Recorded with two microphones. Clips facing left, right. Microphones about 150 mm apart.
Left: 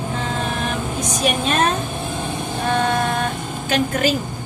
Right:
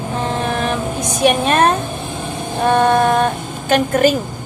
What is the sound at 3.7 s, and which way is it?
Speech, 55° right (ahead or behind).